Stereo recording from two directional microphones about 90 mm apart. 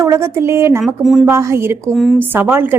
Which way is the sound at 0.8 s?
Centre (ahead or behind).